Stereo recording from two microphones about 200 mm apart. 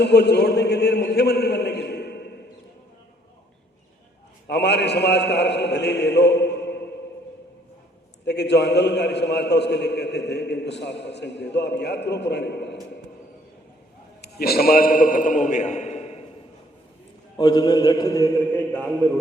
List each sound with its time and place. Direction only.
0.0 s a man's voice: 55° left (ahead or behind)
4.4 s a man's voice: 55° left (ahead or behind)
8.2 s a man's voice: 55° left (ahead or behind)
14.2 s a man's voice: 50° left (ahead or behind); by 16.2 s 30° left (ahead or behind)
17.3 s a man's voice: 20° left (ahead or behind)